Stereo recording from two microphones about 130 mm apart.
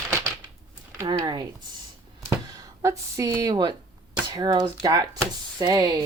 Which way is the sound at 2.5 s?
25° right (ahead or behind).